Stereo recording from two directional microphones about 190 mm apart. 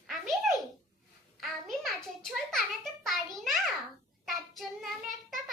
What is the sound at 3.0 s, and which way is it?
Speech, centre (ahead or behind).